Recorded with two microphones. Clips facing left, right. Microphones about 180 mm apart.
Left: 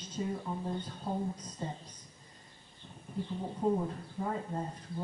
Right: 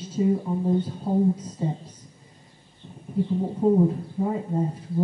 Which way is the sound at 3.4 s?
25° right (ahead or behind).